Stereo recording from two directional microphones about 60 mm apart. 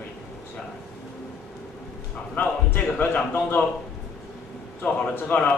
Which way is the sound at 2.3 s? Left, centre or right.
Left.